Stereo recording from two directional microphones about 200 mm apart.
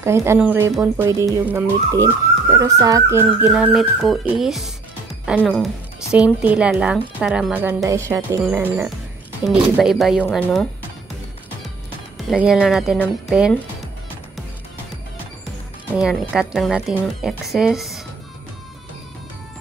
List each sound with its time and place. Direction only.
0.0 s a woman's voice: 15° right (ahead or behind); by 6.1 s 5° left (ahead or behind)
6.1 s a woman's voice: 5° right (ahead or behind)
12.3 s a woman's voice: 5° right (ahead or behind)
15.9 s a woman's voice: 5° right (ahead or behind)